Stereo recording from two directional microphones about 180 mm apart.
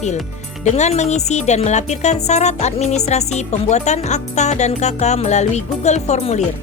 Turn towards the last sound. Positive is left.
turn(degrees=35)  # may be behind; listen again after turning